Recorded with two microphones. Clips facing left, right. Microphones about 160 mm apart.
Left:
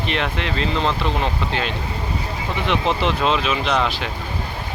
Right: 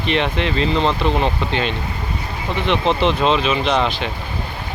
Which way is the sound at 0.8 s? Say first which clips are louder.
Right 3 dB; 30° right (ahead or behind).